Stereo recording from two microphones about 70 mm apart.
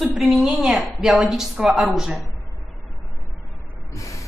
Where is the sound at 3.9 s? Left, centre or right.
Left.